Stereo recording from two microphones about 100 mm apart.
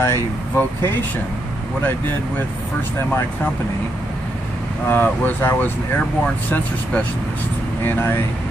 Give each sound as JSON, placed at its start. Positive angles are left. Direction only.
{"t": 0.0, "sound": "speech", "side_deg": 25}
{"t": 4.8, "sound": "speech", "side_deg": 20}